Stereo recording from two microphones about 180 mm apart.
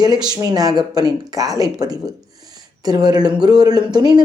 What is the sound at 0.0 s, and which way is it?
A woman's voice, 20° right (ahead or behind).